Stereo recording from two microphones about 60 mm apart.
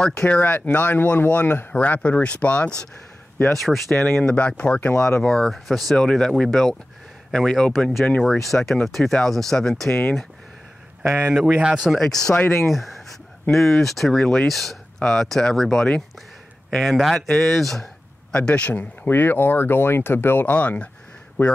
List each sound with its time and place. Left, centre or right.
0.0 s speech: centre
0.6 s speech: left
3.4 s speech: centre
4.0 s speech: centre
8.5 s speech: centre
11.0 s speech: centre
12.0 s speech: centre
14.2 s speech: centre
14.5 s speech: centre
18.3 s speech: centre
19.0 s speech: left